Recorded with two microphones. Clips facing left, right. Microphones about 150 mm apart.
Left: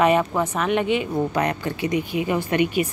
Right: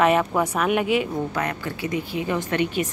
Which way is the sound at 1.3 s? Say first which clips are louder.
Left 4 dB; 20° left (ahead or behind).